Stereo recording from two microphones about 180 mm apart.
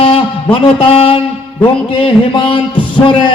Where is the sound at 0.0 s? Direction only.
30° left (ahead or behind).